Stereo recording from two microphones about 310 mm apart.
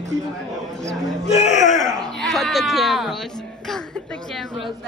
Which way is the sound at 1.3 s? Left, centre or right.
Left.